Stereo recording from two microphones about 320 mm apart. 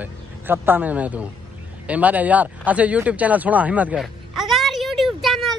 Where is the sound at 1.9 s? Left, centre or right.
Centre.